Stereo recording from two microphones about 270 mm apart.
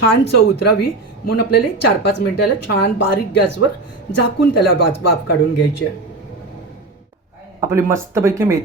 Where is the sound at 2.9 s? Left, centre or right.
Left.